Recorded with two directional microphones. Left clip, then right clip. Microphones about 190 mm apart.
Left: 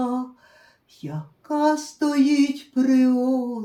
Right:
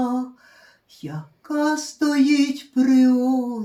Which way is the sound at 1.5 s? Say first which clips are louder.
Left 1 dB; 25° left (ahead or behind).